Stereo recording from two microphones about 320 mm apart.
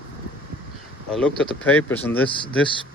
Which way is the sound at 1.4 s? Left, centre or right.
Centre.